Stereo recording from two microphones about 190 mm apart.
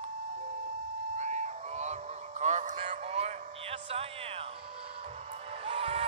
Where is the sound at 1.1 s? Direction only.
40° right (ahead or behind).